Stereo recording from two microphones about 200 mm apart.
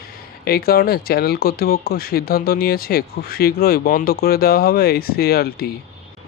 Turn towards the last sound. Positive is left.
turn(degrees=50)  # may be behind; listen again after turning